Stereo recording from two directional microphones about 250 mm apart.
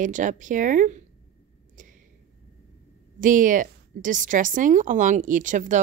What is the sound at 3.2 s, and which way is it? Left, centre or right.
Speech, right.